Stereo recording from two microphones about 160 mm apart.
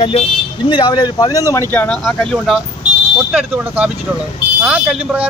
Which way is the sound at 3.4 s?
10° right (ahead or behind).